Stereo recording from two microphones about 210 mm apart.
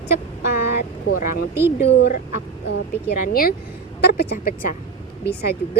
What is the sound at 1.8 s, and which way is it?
Speech, 50° left (ahead or behind).